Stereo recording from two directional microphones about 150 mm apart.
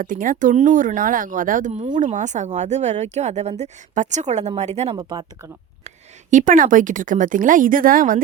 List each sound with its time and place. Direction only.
0.0 s speech: 65° right (ahead or behind); by 4.9 s 45° right (ahead or behind)
4.9 s speech: 25° right (ahead or behind)
6.3 s speech: 60° right (ahead or behind)